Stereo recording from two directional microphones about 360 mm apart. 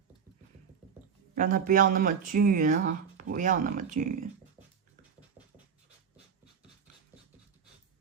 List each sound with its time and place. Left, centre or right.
1.4 s speech: right